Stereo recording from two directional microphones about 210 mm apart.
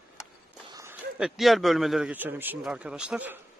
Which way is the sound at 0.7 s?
10° right (ahead or behind).